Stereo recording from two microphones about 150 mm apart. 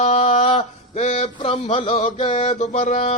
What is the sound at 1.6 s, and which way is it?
Music, 40° left (ahead or behind).